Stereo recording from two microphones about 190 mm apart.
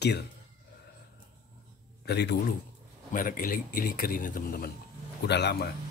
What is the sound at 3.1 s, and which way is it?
A man's voice, 45° left (ahead or behind).